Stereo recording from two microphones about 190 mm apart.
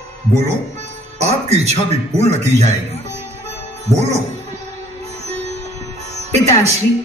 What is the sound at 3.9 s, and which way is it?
Music, 35° right (ahead or behind).